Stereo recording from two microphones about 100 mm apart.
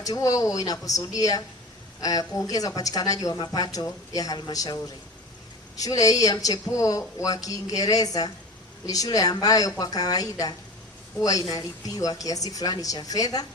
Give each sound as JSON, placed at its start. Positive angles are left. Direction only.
{"t": 0.0, "sound": "speech", "side_deg": 35}